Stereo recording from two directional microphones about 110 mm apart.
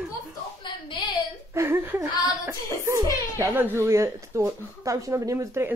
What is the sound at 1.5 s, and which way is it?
Speech, 20° right (ahead or behind).